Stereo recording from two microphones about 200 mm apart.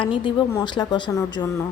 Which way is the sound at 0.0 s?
25° left (ahead or behind).